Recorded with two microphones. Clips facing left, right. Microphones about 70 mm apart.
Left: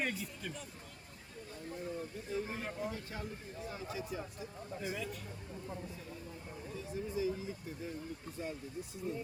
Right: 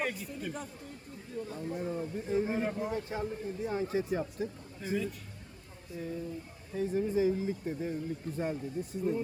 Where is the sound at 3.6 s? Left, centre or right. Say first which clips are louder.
Right 10 dB; right.